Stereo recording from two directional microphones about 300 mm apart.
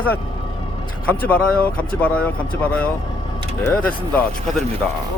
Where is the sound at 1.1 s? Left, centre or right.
Centre.